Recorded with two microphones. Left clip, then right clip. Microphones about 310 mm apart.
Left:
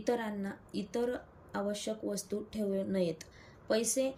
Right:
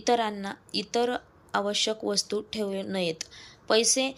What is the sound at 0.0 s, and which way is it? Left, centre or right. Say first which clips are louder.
A woman's voice: right 9 dB; centre.